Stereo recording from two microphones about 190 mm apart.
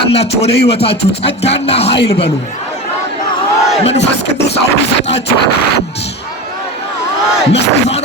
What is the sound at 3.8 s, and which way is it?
Music, 35° left (ahead or behind).